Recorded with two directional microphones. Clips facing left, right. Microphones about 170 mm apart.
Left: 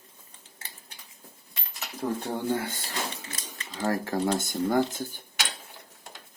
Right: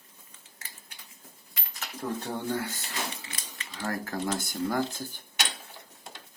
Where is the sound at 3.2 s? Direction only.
40° left (ahead or behind).